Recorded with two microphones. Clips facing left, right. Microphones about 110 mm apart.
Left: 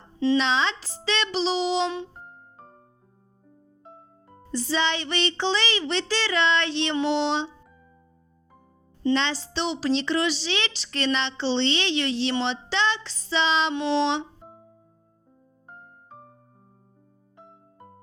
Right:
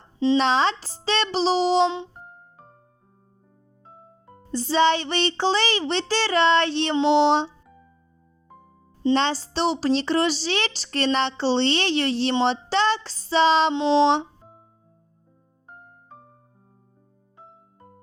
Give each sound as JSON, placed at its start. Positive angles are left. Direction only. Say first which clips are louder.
{"t": 0.3, "sound": "child singing", "louder": "right 4 dB", "side_deg": -45}
{"t": 4.5, "sound": "child singing", "louder": "right 6 dB", "side_deg": -35}
{"t": 6.9, "sound": "a sound", "louder": "right 6 dB", "side_deg": -25}
{"t": 9.1, "sound": "child singing", "louder": "right 3 dB", "side_deg": -40}
{"t": 10.8, "sound": "speech", "louder": "right 4 dB", "side_deg": -40}
{"t": 12.7, "sound": "child singing", "louder": "right 4 dB", "side_deg": -40}
{"t": 13.7, "sound": "a sound", "louder": "right 5 dB", "side_deg": -20}